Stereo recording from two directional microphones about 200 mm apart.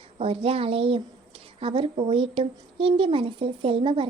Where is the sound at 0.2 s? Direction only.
30° right (ahead or behind).